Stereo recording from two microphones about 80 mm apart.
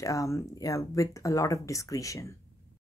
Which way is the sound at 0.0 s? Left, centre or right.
Left.